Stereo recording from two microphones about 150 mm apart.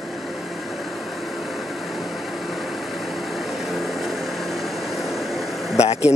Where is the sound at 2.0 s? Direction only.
Centre (ahead or behind).